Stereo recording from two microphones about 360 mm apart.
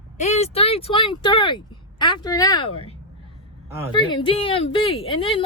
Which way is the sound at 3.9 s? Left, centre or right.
Centre.